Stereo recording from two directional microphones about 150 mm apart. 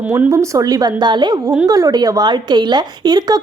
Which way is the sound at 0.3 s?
20° right (ahead or behind).